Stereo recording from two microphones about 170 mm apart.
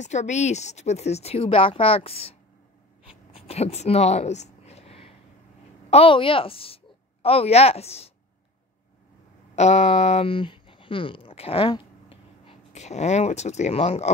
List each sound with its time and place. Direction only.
0.0 s speech: 45° left (ahead or behind)
3.3 s a sound: 35° left (ahead or behind)
5.9 s a woman's voice: 35° left (ahead or behind)
9.6 s speech: 40° left (ahead or behind)